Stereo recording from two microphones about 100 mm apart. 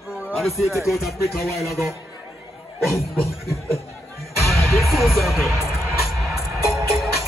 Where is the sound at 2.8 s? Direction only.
Centre (ahead or behind).